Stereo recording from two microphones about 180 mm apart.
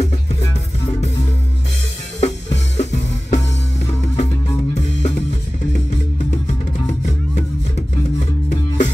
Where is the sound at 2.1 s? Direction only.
40° left (ahead or behind).